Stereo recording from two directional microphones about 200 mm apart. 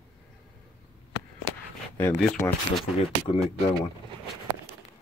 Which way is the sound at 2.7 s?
Centre (ahead or behind).